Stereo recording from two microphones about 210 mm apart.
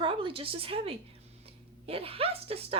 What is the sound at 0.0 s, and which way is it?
A woman's voice, 25° right (ahead or behind).